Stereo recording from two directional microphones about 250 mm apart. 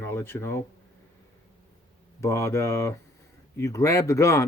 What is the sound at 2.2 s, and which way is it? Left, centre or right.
A man's voice, centre.